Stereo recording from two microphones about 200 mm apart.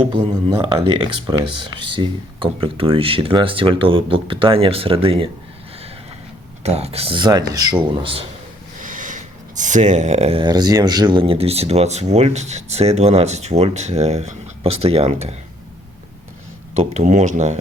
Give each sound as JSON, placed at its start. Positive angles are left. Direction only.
{"t": 0.1, "sound": "speech", "side_deg": -25}
{"t": 6.6, "sound": "speech", "side_deg": -30}
{"t": 8.8, "sound": "speech", "side_deg": -40}
{"t": 16.9, "sound": "speech", "side_deg": -35}